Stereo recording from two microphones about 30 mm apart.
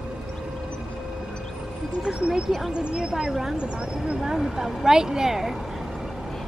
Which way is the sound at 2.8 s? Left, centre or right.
Right.